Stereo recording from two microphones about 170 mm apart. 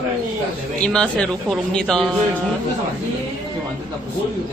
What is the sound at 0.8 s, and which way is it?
Speech, 5° left (ahead or behind).